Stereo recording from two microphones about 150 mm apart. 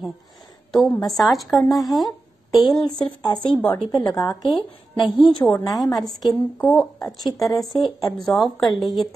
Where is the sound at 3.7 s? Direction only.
30° left (ahead or behind).